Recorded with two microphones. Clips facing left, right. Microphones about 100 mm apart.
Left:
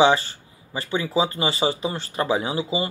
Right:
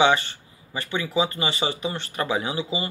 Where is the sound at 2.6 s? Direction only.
15° left (ahead or behind).